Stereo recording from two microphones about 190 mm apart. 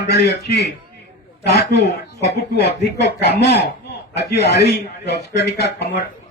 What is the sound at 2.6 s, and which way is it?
Speech, 60° left (ahead or behind).